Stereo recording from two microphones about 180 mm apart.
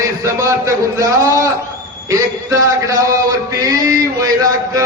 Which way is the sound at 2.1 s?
15° right (ahead or behind).